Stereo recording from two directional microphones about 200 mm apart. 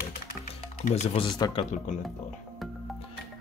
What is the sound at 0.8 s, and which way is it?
Speech, 35° left (ahead or behind).